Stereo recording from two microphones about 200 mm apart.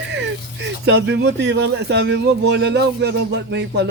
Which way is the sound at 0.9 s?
60° right (ahead or behind).